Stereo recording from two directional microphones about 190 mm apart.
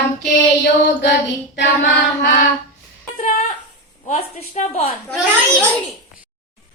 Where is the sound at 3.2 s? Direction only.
45° left (ahead or behind).